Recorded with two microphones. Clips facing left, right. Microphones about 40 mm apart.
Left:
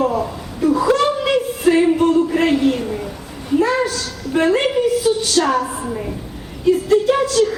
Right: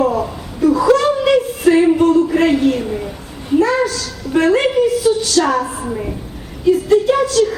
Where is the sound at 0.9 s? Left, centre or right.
Centre.